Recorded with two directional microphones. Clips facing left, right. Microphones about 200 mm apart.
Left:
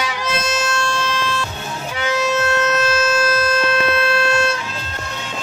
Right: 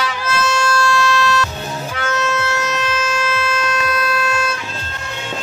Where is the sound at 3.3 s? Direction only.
40° left (ahead or behind).